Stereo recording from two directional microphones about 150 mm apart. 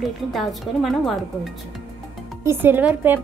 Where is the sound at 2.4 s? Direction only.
15° right (ahead or behind).